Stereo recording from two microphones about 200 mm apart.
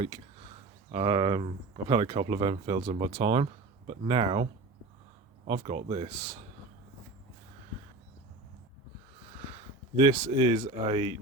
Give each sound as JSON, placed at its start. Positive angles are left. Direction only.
{"t": 0.9, "sound": "speech", "side_deg": -25}
{"t": 5.5, "sound": "speech", "side_deg": -30}
{"t": 9.9, "sound": "speech", "side_deg": -25}